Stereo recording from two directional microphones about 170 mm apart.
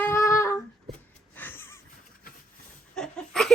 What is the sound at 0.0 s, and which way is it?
Humming, 15° left (ahead or behind).